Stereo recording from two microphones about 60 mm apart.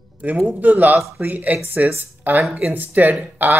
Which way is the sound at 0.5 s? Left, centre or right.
Right.